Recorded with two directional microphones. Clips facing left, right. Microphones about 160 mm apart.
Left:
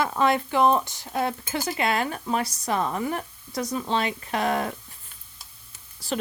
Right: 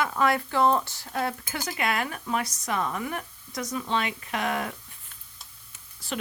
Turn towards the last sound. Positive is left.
turn(degrees=35)  # may be behind; listen again after turning